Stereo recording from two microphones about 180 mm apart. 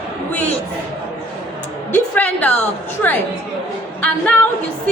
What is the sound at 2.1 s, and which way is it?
A man's voice, 10° left (ahead or behind).